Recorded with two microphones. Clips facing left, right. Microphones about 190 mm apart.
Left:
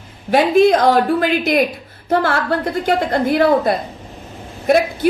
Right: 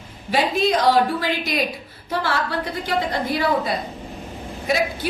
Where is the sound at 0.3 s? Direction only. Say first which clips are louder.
Left 8 dB; 55° left (ahead or behind).